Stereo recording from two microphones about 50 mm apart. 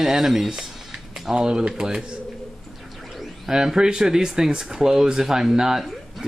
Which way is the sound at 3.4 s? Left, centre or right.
Centre.